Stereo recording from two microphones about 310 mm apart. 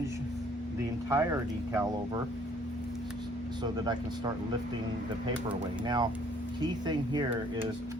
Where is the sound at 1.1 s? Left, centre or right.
Centre.